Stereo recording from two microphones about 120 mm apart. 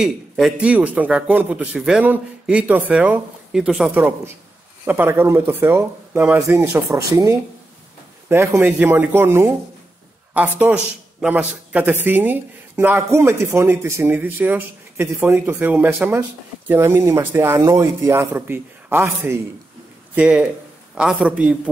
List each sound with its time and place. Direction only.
0.0 s a man's voice: 5° right (ahead or behind)
4.8 s a man's voice: 20° right (ahead or behind)
20.2 s a man's voice: 10° right (ahead or behind)